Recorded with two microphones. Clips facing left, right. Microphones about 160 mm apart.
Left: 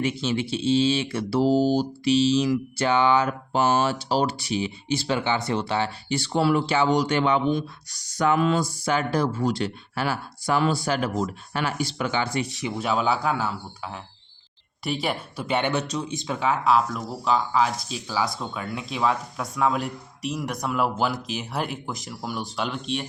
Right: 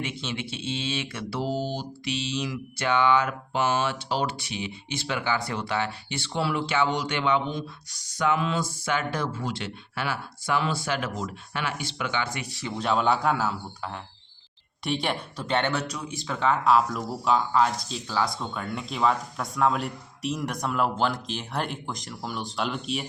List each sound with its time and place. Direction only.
0.0 s speech: 35° left (ahead or behind)
8.2 s a sound: 45° left (ahead or behind)
8.8 s speech: 35° left (ahead or behind)
12.5 s speech: 15° left (ahead or behind)
16.5 s speech: centre (ahead or behind)